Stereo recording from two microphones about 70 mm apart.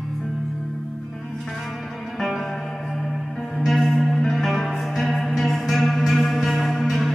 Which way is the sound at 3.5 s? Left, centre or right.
Centre.